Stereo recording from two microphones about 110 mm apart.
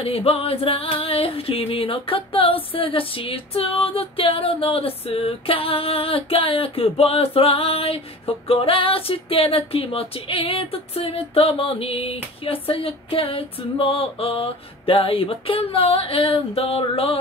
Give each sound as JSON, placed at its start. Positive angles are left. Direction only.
{"t": 0.0, "sound": "female singing", "side_deg": 60}